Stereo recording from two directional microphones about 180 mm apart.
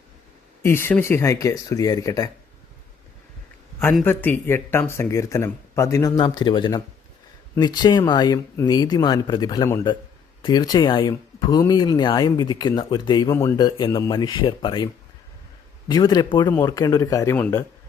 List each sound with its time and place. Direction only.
0.6 s speech: 15° left (ahead or behind)
4.0 s speech: 10° left (ahead or behind); by 14.8 s 25° left (ahead or behind)
15.9 s speech: 25° left (ahead or behind)